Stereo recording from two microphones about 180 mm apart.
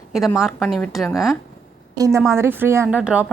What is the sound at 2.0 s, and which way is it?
Speech, 15° right (ahead or behind).